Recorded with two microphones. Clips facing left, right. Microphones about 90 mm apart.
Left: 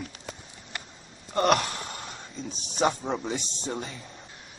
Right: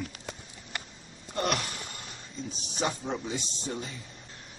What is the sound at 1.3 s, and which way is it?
Gasp, 50° left (ahead or behind).